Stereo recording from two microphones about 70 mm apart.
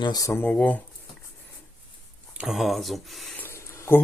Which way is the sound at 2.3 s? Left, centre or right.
Centre.